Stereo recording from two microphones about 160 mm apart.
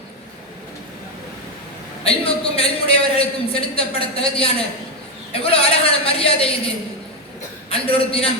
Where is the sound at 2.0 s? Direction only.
35° left (ahead or behind).